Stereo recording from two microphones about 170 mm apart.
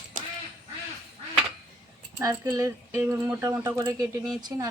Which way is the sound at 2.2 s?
20° right (ahead or behind).